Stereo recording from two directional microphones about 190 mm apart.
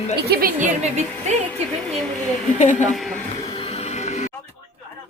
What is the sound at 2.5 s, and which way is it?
Speech, 40° left (ahead or behind).